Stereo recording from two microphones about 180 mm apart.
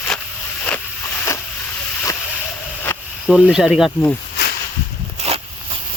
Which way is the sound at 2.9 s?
10° left (ahead or behind).